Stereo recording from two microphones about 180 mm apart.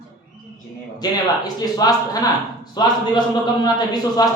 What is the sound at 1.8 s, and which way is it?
Speech, 20° left (ahead or behind).